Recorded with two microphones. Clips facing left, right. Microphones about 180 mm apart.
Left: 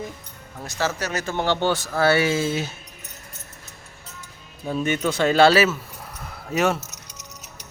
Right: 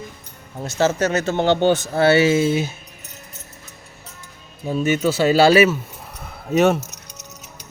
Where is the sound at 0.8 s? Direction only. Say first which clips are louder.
Right 7 dB; 25° right (ahead or behind).